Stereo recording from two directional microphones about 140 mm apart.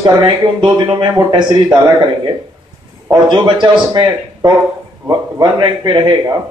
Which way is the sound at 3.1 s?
35° right (ahead or behind).